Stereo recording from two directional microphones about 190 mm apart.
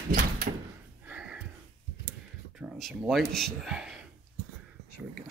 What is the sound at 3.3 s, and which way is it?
Speech, centre (ahead or behind).